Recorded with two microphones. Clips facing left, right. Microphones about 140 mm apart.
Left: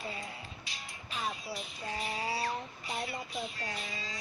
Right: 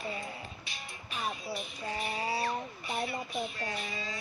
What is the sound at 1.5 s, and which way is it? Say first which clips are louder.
Speech: right 2 dB; 60° right (ahead or behind).